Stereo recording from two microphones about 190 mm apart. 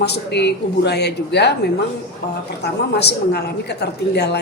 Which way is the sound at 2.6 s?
60° left (ahead or behind).